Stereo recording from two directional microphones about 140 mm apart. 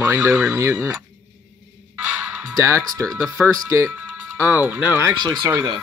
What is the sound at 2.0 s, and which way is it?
Music, 10° right (ahead or behind).